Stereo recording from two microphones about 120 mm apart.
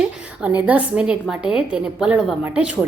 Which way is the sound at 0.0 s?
10° right (ahead or behind).